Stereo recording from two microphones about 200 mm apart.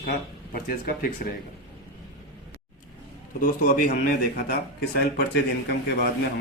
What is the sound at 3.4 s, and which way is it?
Speech, 45° left (ahead or behind).